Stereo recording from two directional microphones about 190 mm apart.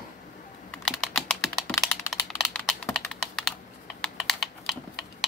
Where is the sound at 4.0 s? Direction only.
Centre (ahead or behind).